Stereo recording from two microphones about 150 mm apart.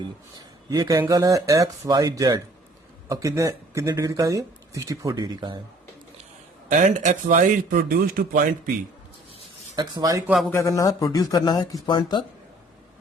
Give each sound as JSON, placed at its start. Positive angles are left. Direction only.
{"t": 0.3, "sound": "speech", "side_deg": -25}
{"t": 6.7, "sound": "speech", "side_deg": -55}
{"t": 9.7, "sound": "speech", "side_deg": -30}
{"t": 10.5, "sound": "speech", "side_deg": 20}